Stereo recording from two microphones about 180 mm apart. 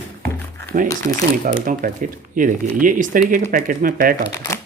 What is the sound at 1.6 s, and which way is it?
Speech, 50° right (ahead or behind).